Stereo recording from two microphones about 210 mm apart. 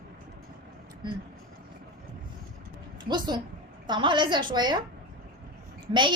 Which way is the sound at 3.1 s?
20° right (ahead or behind).